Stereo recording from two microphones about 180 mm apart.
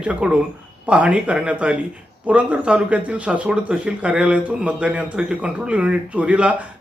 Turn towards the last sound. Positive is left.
turn(degrees=-5)  # may be behind; listen again after turning